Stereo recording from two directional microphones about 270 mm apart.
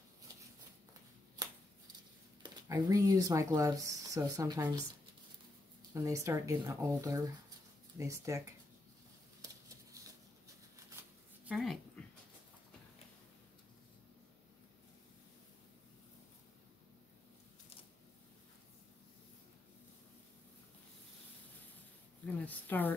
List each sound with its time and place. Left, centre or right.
1.4 s shuffling cards: centre
2.4 s speech: centre
5.9 s speech: centre
11.4 s speech: centre
22.2 s a sound: centre